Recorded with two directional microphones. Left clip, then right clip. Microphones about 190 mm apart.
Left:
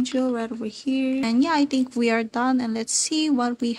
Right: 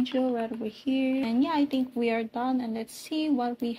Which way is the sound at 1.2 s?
50° left (ahead or behind).